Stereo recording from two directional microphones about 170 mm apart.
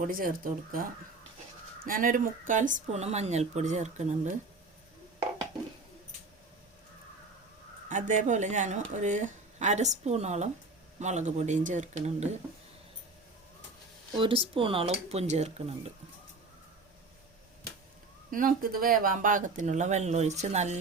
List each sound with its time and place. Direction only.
0.0 s speech: 55° right (ahead or behind)
1.8 s a woman's voice: 55° right (ahead or behind)
7.9 s a woman's voice: 50° right (ahead or behind)
14.2 s speech: 30° right (ahead or behind)
18.3 s a woman's voice: 55° right (ahead or behind)